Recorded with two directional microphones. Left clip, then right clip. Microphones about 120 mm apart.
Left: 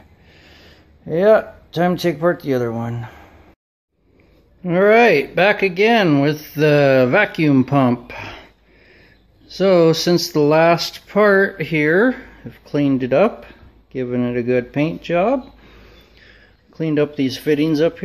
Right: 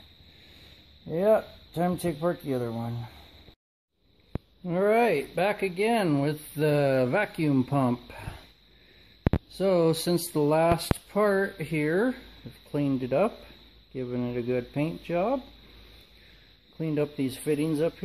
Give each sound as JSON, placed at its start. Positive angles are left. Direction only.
{"t": 1.0, "sound": "a man's voice", "side_deg": -15}
{"t": 4.6, "sound": "speech", "side_deg": -10}
{"t": 9.5, "sound": "speech", "side_deg": -10}
{"t": 16.7, "sound": "speech", "side_deg": -10}